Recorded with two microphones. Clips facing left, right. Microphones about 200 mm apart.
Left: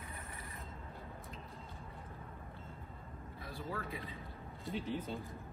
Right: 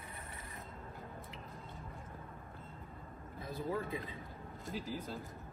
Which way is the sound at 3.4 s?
20° right (ahead or behind).